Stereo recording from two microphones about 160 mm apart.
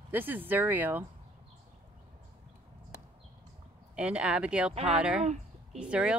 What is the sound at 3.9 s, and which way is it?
Speech, 5° right (ahead or behind).